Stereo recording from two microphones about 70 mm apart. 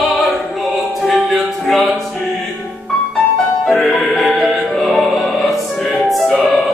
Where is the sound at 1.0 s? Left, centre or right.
Centre.